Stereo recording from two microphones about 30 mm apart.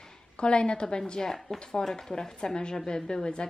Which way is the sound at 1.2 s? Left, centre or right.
Centre.